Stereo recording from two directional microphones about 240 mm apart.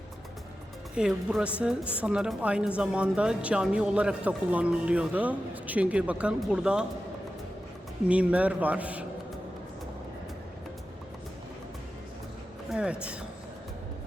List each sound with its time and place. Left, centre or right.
0.9 s speech: centre
8.0 s speech: centre
12.7 s speech: centre